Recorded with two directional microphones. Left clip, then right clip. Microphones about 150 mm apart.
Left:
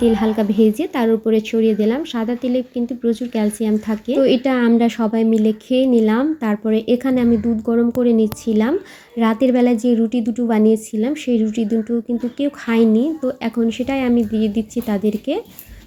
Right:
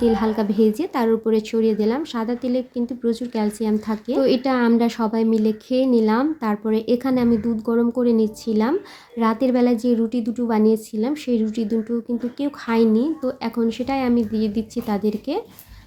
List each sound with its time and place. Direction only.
0.0 s speech: centre (ahead or behind)
12.4 s speech: 15° left (ahead or behind)
12.7 s speech: 5° left (ahead or behind)